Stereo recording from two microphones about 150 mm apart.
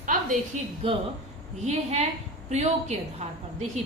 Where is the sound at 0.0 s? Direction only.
60° right (ahead or behind).